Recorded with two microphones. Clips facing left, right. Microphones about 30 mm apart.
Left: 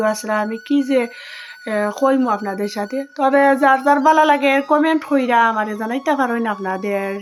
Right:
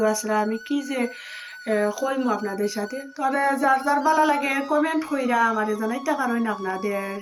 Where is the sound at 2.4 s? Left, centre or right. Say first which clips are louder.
Left 3 dB; left.